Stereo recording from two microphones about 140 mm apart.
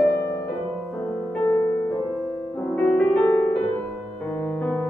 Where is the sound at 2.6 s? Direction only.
5° left (ahead or behind).